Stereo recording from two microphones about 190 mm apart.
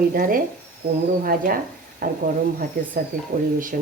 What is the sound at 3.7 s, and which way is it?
Speech, 45° right (ahead or behind).